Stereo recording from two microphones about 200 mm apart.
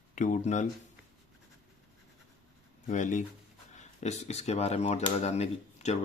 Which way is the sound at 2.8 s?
40° left (ahead or behind).